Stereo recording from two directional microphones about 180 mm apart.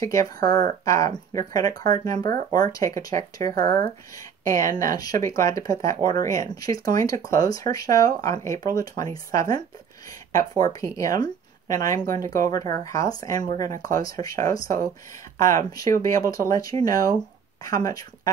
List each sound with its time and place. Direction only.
0.0 s speech: 20° left (ahead or behind)